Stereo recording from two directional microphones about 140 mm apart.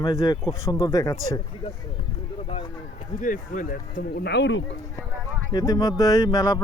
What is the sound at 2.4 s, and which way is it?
Speech, 40° left (ahead or behind).